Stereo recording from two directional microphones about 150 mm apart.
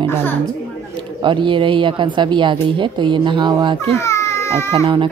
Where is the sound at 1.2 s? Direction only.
35° right (ahead or behind).